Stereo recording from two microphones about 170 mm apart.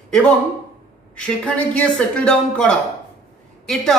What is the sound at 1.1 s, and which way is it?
A man's voice, 5° left (ahead or behind).